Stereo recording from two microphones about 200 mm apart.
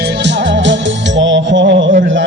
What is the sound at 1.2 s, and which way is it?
Music, 65° right (ahead or behind).